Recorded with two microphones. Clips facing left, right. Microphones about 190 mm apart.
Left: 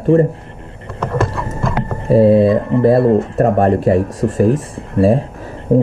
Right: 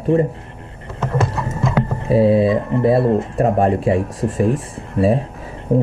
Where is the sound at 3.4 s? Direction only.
50° left (ahead or behind).